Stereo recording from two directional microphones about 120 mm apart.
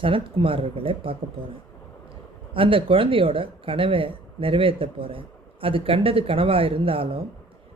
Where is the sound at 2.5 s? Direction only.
45° right (ahead or behind).